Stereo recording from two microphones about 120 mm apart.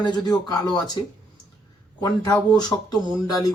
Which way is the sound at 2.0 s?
35° left (ahead or behind).